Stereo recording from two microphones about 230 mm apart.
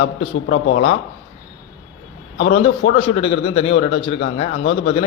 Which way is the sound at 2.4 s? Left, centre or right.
Left.